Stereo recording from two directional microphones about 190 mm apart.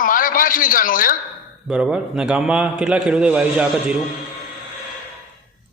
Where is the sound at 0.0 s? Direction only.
45° left (ahead or behind).